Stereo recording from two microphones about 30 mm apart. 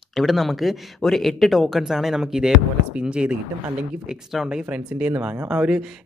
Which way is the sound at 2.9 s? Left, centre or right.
Right.